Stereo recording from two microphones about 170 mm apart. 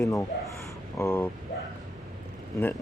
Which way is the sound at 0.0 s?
20° left (ahead or behind).